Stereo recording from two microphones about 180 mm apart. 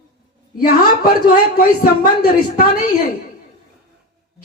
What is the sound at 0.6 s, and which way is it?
A man's voice, 55° left (ahead or behind).